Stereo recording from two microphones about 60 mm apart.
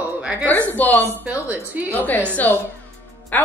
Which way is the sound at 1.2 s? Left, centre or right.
Right.